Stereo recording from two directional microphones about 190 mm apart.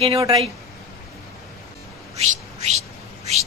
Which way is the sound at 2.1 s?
35° right (ahead or behind).